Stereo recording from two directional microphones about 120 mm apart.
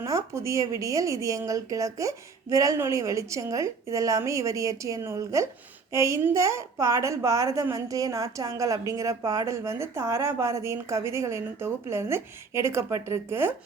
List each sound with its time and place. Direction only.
0.0 s a woman's voice: 25° right (ahead or behind)